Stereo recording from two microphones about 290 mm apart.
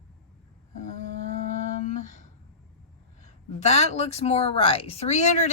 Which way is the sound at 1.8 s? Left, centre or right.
Left.